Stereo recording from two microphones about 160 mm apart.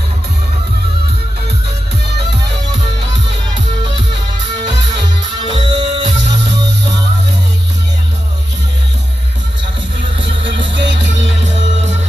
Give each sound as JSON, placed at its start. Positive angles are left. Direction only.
{"t": 4.9, "sound": "music", "side_deg": -30}
{"t": 10.2, "sound": "music", "side_deg": -90}